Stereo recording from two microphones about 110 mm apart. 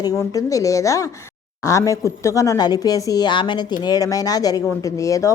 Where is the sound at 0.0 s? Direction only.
35° left (ahead or behind).